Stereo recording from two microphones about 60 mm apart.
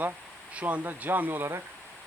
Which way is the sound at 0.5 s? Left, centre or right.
Right.